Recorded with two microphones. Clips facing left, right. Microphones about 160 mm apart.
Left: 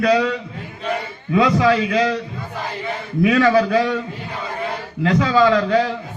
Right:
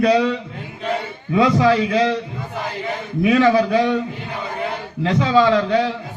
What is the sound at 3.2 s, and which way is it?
Speech, 20° right (ahead or behind).